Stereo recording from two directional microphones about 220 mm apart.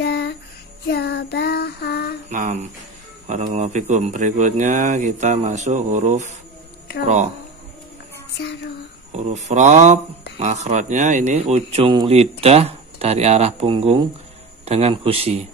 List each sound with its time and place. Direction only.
0.0 s child singing: 50° left (ahead or behind)
2.2 s a sound: 35° right (ahead or behind)
3.3 s speech: 30° right (ahead or behind)
9.1 s speech: 30° right (ahead or behind)